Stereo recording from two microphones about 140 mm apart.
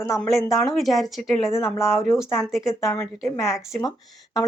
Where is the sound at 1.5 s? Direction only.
20° left (ahead or behind).